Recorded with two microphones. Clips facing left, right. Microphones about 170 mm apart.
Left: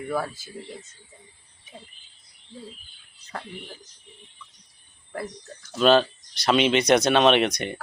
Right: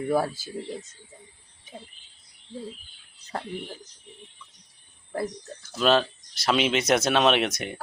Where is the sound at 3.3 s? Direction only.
35° right (ahead or behind).